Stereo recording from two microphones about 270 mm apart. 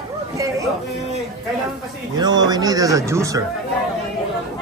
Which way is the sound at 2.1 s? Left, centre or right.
Centre.